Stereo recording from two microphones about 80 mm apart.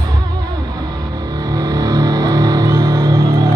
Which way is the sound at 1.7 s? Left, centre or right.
Right.